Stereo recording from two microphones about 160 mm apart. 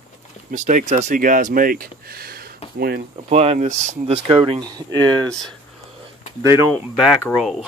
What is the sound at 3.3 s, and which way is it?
Speech, 40° right (ahead or behind).